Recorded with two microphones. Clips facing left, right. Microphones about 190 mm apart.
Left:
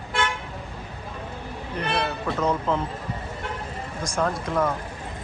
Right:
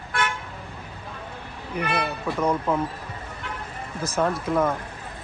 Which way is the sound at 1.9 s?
10° right (ahead or behind).